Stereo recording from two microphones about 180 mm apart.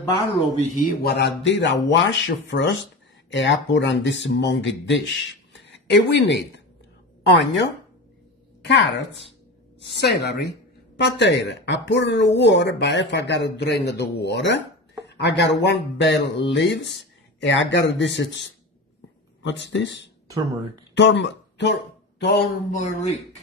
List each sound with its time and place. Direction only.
0.6 s speech: 45° left (ahead or behind)
1.0 s speech: 70° left (ahead or behind)
8.6 s speech: 80° left
9.8 s speech: 70° left (ahead or behind)
17.0 s speech: 85° left
20.2 s speech: 20° right (ahead or behind)
20.9 s speech: 75° left (ahead or behind)
22.7 s speech: 40° left (ahead or behind)